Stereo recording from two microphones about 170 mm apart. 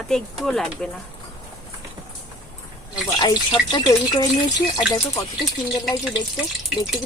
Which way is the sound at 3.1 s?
25° left (ahead or behind).